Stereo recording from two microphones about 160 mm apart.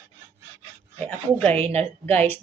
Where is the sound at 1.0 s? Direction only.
10° left (ahead or behind).